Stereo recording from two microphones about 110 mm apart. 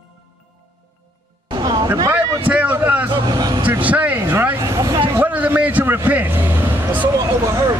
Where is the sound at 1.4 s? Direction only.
40° right (ahead or behind).